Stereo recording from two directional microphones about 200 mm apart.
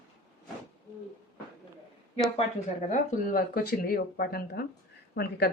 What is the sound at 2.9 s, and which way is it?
A woman's voice, 50° left (ahead or behind).